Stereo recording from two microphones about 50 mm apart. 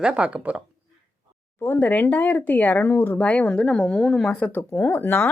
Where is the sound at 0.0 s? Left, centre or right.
Right.